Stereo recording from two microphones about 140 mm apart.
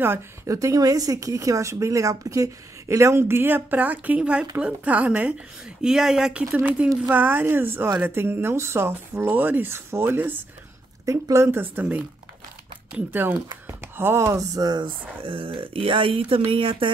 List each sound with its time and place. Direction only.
0.0 s speech: 20° right (ahead or behind)
15.2 s speech: 40° right (ahead or behind)